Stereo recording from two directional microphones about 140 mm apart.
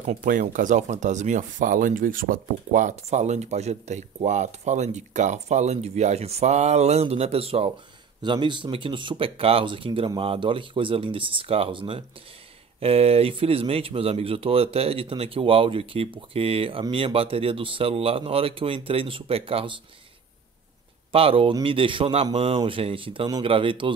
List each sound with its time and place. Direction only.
0.0 s speech: 65° right (ahead or behind); by 19.7 s 40° right (ahead or behind)
21.1 s speech: 45° right (ahead or behind)